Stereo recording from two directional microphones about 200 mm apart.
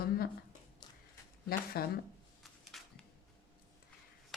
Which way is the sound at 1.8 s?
50° left (ahead or behind).